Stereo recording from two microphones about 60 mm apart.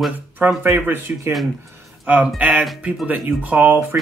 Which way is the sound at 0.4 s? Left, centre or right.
Right.